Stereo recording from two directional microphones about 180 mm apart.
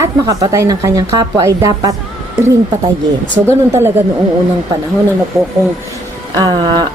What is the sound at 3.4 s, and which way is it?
Speech, 15° right (ahead or behind).